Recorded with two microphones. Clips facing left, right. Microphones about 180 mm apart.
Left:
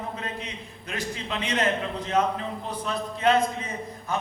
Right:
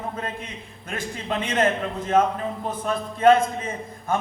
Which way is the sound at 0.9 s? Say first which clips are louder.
Right 3 dB; 50° right (ahead or behind).